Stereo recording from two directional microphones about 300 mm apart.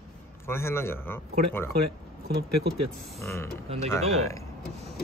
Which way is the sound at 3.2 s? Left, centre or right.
Centre.